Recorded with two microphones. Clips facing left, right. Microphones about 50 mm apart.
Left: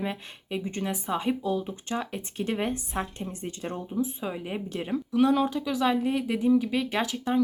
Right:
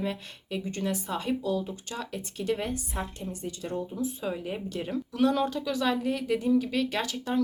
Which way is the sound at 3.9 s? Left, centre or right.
Centre.